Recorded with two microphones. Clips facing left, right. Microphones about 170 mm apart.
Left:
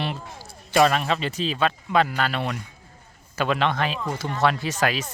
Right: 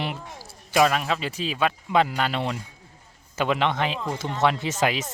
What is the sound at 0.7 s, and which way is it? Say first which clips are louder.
Speech: left 1 dB; 5° right (ahead or behind).